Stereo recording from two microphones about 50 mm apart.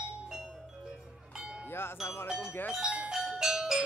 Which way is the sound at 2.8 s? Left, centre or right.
Right.